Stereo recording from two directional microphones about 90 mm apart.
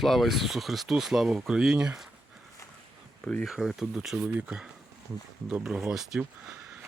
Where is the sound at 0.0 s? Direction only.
Centre (ahead or behind).